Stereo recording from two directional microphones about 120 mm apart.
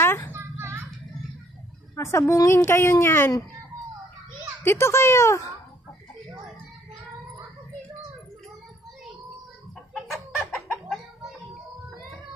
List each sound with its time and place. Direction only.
0.0 s children playing: 20° left (ahead or behind)
0.3 s children playing: 20° right (ahead or behind)
2.0 s a woman's voice: 25° left (ahead or behind)
4.6 s a woman's voice: 20° left (ahead or behind)
9.9 s chicken: centre (ahead or behind)